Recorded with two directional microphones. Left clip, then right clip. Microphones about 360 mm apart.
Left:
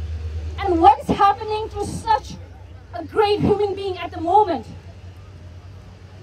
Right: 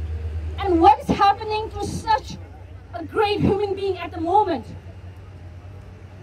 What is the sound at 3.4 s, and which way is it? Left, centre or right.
Speech, centre.